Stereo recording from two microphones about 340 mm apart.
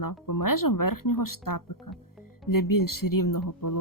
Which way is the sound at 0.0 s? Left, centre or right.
Left.